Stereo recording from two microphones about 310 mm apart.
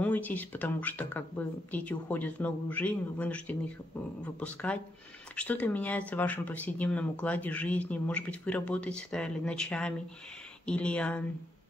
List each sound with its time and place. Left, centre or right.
0.0 s speech: centre